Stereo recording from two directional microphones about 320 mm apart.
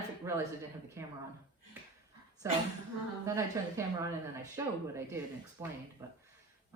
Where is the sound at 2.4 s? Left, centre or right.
Centre.